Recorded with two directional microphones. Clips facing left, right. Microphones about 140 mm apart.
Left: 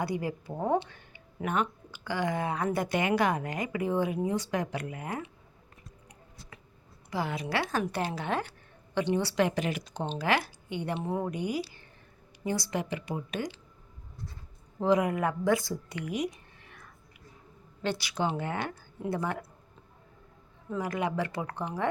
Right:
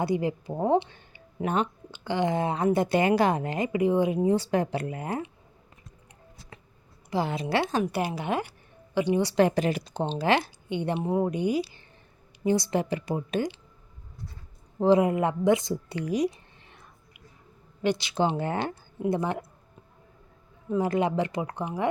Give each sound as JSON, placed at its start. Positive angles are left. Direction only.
{"t": 0.0, "sound": "speech", "side_deg": -20}
{"t": 6.5, "sound": "a sound", "side_deg": -30}
{"t": 7.1, "sound": "speech", "side_deg": -25}
{"t": 9.3, "sound": "speech", "side_deg": -35}
{"t": 12.8, "sound": "speech", "side_deg": -35}
{"t": 14.8, "sound": "speech", "side_deg": -30}
{"t": 16.0, "sound": "a sound", "side_deg": -35}
{"t": 17.8, "sound": "speech", "side_deg": -20}
{"t": 20.7, "sound": "speech", "side_deg": -25}